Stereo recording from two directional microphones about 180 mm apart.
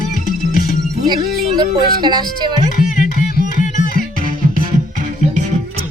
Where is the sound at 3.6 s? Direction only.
45° left (ahead or behind).